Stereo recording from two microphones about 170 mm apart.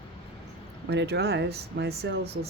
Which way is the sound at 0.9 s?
85° right.